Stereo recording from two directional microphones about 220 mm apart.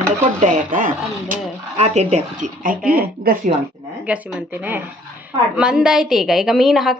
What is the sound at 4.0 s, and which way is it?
A woman's voice, 5° right (ahead or behind).